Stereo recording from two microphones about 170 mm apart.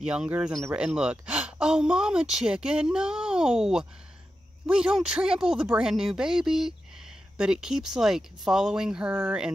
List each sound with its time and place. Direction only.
0.0 s speech: 5° right (ahead or behind)